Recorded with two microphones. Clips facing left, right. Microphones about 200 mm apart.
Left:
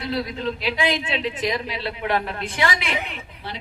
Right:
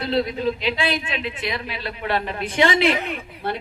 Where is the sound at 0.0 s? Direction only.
25° right (ahead or behind).